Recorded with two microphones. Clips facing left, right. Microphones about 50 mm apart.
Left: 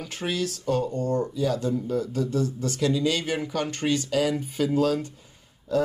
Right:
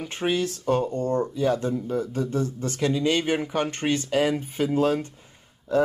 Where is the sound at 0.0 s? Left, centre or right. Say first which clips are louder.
Right 3 dB; right.